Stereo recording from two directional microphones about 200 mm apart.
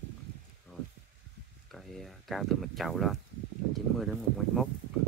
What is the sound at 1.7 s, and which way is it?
Speech, centre (ahead or behind).